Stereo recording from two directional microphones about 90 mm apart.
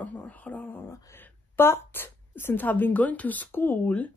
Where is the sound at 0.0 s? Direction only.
15° left (ahead or behind).